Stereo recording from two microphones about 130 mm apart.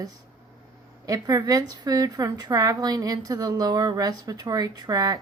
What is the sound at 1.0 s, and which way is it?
A woman's voice, 30° right (ahead or behind).